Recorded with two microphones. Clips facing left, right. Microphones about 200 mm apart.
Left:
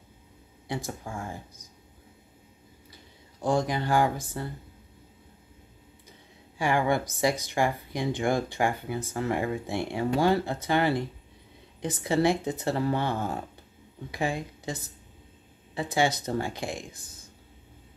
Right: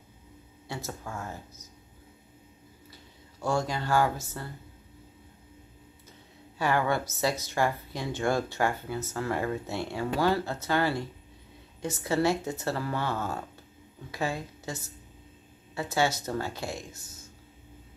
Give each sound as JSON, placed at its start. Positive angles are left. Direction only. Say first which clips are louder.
{"t": 0.7, "sound": "speech", "louder": "left 3 dB", "side_deg": 15}
{"t": 3.3, "sound": "speech", "louder": "left 3 dB", "side_deg": 15}
{"t": 6.6, "sound": "speech", "louder": "left 2 dB", "side_deg": 15}